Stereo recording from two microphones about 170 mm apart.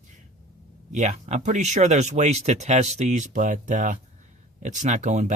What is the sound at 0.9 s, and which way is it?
Speech, 45° right (ahead or behind).